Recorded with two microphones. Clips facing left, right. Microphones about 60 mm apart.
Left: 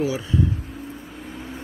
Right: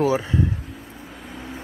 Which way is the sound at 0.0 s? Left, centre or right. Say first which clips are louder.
Right 4 dB; right.